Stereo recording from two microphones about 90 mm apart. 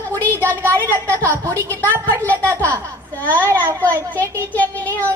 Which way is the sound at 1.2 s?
30° right (ahead or behind).